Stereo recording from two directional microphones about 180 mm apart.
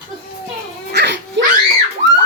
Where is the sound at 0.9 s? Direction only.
70° right (ahead or behind).